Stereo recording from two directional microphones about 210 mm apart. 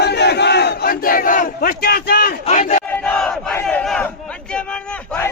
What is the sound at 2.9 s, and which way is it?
Battle cry, 5° left (ahead or behind).